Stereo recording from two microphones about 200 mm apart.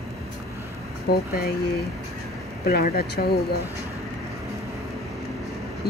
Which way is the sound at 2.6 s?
50° left (ahead or behind).